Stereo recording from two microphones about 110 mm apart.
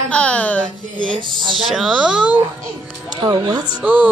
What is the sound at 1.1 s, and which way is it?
Speech, 50° right (ahead or behind).